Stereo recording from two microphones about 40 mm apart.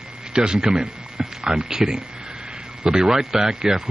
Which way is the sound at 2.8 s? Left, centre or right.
Centre.